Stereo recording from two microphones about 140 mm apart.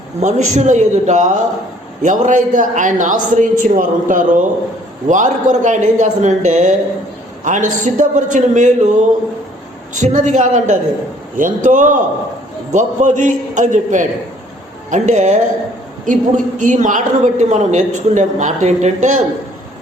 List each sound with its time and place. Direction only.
0.2 s a woman's voice: 60° right (ahead or behind)